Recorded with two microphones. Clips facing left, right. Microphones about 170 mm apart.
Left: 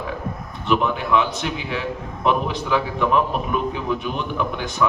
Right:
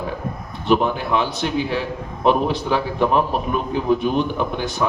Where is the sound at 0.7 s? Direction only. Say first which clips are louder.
Right 2 dB; 35° right (ahead or behind).